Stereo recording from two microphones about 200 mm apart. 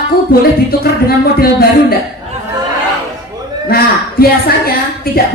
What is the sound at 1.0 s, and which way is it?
Music, 50° left (ahead or behind).